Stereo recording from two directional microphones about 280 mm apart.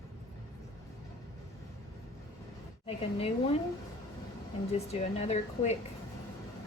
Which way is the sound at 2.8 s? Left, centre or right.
Left.